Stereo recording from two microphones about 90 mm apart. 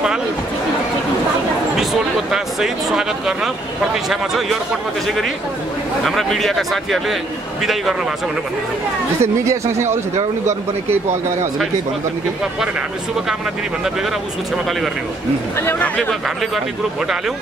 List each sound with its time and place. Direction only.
2.3 s speech: 5° right (ahead or behind)
6.0 s speech: centre (ahead or behind)
9.2 s speech: 30° right (ahead or behind)